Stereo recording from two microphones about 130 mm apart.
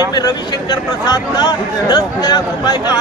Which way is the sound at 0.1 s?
35° left (ahead or behind).